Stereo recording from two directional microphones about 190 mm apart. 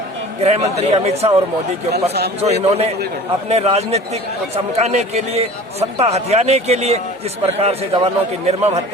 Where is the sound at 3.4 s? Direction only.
35° right (ahead or behind).